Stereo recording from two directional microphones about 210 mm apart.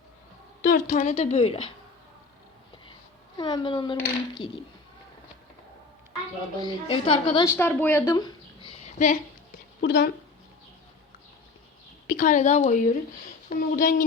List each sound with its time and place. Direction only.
0.6 s a woman's voice: 40° left (ahead or behind)
3.3 s speech: 20° left (ahead or behind)
6.6 s speech: 20° left (ahead or behind)
7.4 s a woman's voice: 10° left (ahead or behind); by 9.1 s 35° left (ahead or behind)
9.8 s a woman's voice: 55° left (ahead or behind)
12.0 s a woman's voice: 40° left (ahead or behind)